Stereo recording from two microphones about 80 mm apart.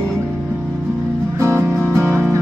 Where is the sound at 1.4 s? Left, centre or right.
Right.